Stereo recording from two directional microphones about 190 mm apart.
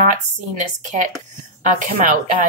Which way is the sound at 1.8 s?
40° right (ahead or behind).